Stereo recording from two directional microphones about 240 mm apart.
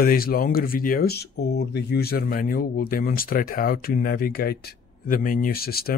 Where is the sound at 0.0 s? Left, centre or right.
Left.